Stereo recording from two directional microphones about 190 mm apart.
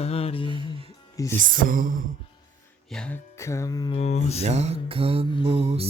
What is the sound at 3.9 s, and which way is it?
Music, 35° left (ahead or behind).